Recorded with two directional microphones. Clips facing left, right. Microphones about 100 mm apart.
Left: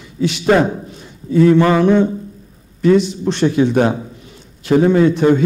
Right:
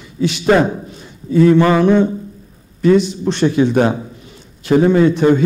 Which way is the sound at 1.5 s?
10° right (ahead or behind).